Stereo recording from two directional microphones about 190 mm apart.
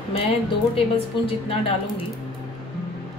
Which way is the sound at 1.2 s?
30° left (ahead or behind).